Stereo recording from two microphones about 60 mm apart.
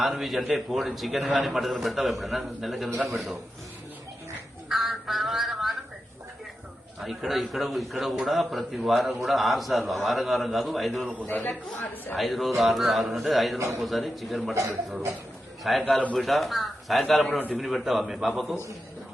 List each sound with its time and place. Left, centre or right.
0.0 s a man's voice: centre
4.7 s a sound: centre
7.0 s a man's voice: centre
11.3 s speech: left
12.1 s a man's voice: centre